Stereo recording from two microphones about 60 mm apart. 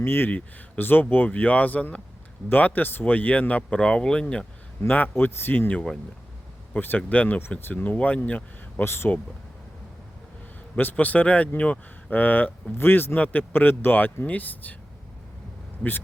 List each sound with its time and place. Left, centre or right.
0.0 s speech: left
0.3 s speech: left
4.8 s speech: left
8.8 s speech: left
10.8 s speech: left